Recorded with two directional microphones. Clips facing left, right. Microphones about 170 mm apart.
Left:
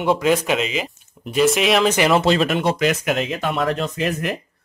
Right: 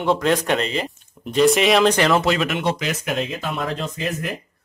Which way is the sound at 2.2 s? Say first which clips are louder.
Left 3 dB; 35° left (ahead or behind).